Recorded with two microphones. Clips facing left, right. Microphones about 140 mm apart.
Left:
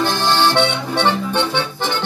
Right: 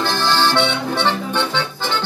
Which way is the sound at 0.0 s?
20° left (ahead or behind).